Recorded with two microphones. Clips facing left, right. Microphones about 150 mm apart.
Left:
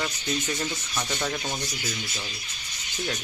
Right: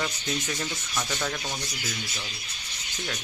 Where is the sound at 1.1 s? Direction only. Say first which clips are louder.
Left 2 dB; 5° left (ahead or behind).